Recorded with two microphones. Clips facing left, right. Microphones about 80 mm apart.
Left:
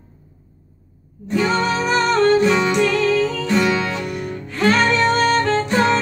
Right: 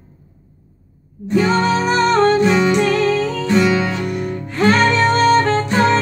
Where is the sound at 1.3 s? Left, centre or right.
Right.